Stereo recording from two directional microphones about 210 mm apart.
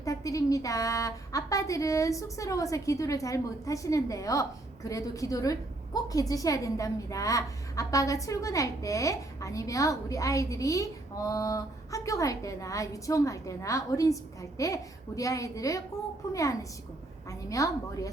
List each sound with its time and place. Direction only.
0.0 s a woman's voice: 15° left (ahead or behind)